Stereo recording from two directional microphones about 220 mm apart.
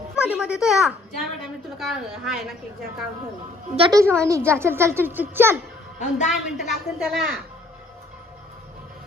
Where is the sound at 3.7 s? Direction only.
20° right (ahead or behind).